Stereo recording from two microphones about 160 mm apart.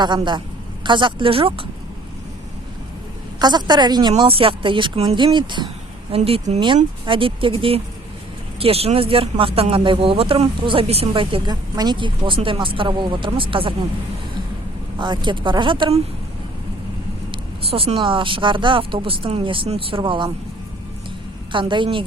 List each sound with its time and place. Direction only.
0.0 s speech: 30° right (ahead or behind)
3.3 s speech: 25° right (ahead or behind)
14.9 s speech: 30° right (ahead or behind)
17.3 s speech: 35° right (ahead or behind)
21.5 s speech: 30° right (ahead or behind)